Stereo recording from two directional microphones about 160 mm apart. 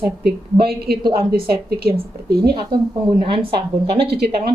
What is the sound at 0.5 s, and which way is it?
A woman's voice, 75° right (ahead or behind).